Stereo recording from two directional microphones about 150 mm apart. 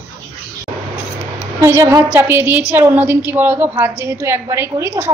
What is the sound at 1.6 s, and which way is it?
A woman's voice, 20° right (ahead or behind).